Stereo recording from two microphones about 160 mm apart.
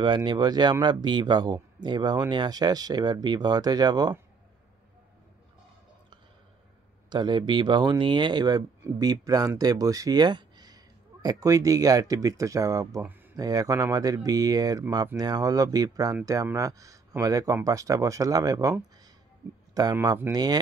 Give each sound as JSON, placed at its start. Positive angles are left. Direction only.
{"t": 0.0, "sound": "speech", "side_deg": -30}
{"t": 7.1, "sound": "speech", "side_deg": -30}